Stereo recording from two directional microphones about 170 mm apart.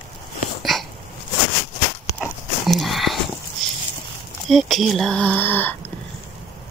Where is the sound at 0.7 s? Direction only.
Centre (ahead or behind).